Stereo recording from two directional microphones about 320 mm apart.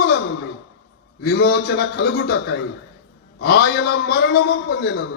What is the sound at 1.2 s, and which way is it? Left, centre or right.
A man's voice, left.